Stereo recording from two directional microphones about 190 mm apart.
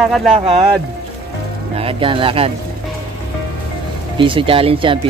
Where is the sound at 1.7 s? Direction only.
30° right (ahead or behind).